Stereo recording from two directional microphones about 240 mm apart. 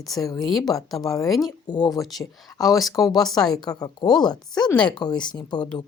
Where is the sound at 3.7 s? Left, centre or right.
Centre.